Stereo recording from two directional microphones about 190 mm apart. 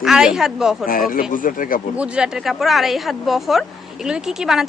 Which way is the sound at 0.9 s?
50° left (ahead or behind).